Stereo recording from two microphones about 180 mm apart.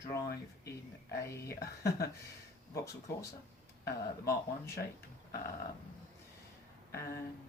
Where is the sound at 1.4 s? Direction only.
60° left (ahead or behind).